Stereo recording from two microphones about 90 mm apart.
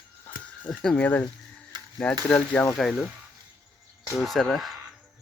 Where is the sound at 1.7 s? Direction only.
55° right (ahead or behind).